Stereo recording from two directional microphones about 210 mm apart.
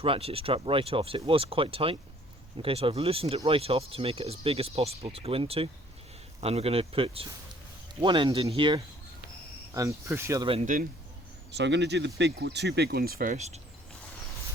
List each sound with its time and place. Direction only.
0.0 s speech: 25° right (ahead or behind)
10.5 s speech: 35° right (ahead or behind)
11.5 s speech: 55° right (ahead or behind); by 13.6 s 35° right (ahead or behind)